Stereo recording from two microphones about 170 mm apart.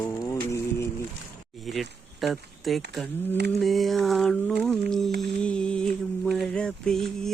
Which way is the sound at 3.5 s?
Centre (ahead or behind).